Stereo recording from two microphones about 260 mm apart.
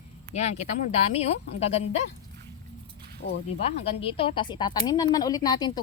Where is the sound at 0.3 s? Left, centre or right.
Left.